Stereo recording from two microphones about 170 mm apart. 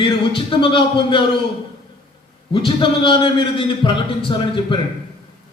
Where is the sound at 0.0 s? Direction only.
30° left (ahead or behind).